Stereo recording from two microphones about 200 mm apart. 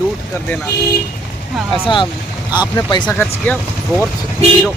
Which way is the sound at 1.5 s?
Centre (ahead or behind).